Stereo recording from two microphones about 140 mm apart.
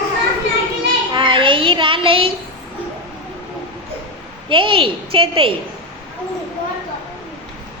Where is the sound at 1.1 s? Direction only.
35° right (ahead or behind).